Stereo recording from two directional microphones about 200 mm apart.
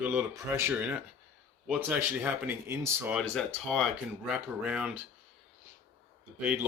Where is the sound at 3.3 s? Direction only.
5° left (ahead or behind).